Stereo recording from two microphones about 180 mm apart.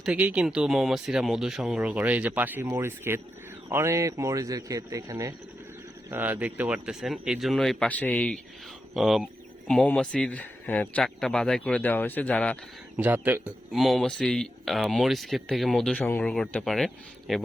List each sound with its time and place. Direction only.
0.0 s a man's voice: 5° right (ahead or behind)
13.0 s speech: 10° right (ahead or behind)